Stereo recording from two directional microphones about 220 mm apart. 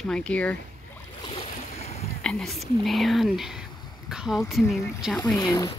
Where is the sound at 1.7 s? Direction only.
30° left (ahead or behind).